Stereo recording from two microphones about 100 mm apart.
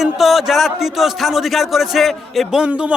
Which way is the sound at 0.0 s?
Centre (ahead or behind).